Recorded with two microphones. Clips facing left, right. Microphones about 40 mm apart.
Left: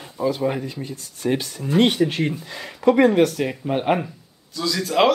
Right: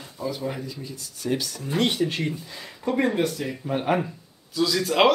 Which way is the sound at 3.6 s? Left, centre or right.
Left.